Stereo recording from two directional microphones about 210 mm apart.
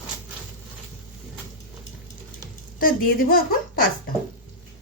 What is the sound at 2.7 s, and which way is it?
Speech, 45° left (ahead or behind).